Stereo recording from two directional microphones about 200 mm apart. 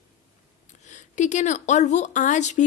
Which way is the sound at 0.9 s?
35° left (ahead or behind).